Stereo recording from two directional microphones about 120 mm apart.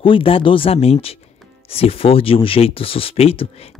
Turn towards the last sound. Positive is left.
turn(degrees=55)  # may be behind; listen again after turning